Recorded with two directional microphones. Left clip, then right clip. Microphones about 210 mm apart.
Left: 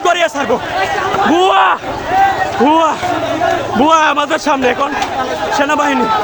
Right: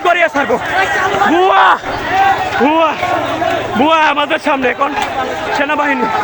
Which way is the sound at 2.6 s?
5° left (ahead or behind).